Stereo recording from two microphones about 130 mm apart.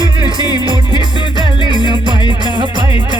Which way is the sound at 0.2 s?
35° left (ahead or behind).